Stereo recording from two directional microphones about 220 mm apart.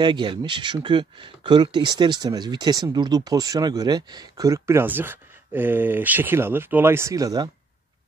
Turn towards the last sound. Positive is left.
turn(degrees=-15)  # may be behind; listen again after turning